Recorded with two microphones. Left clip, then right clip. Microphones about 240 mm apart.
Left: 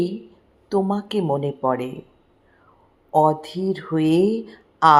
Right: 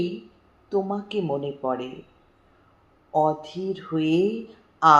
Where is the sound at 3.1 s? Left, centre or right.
Left.